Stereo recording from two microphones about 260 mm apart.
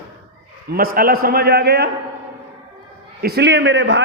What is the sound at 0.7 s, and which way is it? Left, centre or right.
A man's voice, right.